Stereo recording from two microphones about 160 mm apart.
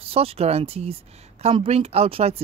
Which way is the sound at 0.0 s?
35° right (ahead or behind).